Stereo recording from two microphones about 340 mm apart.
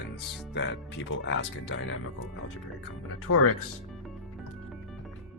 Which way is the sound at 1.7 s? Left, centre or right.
Left.